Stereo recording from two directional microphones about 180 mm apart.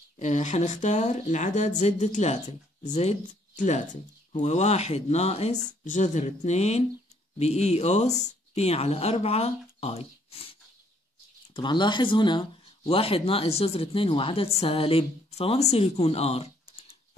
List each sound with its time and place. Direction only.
0.2 s speech: 40° left (ahead or behind)
11.5 s speech: 25° left (ahead or behind)